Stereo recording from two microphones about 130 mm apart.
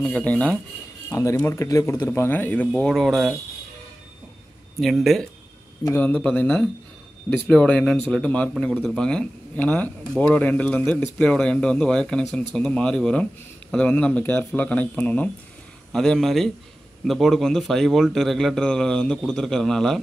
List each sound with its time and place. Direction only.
0.0 s a man's voice: 10° left (ahead or behind)
1.1 s a man's voice: 25° left (ahead or behind); by 3.3 s centre (ahead or behind)
4.7 s a man's voice: centre (ahead or behind)
5.9 s a man's voice: 10° left (ahead or behind)